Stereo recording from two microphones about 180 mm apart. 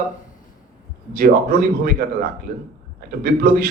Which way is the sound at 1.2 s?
55° right (ahead or behind).